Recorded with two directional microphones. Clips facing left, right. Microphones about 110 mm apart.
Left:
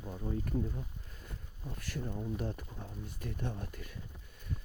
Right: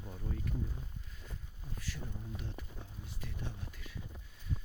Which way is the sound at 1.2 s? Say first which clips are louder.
Left 5 dB; 55° left (ahead or behind).